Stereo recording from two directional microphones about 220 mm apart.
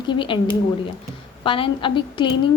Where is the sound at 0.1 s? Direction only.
20° left (ahead or behind).